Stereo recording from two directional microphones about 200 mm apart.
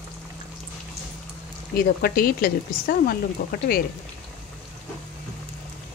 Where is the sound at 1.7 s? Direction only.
50° left (ahead or behind).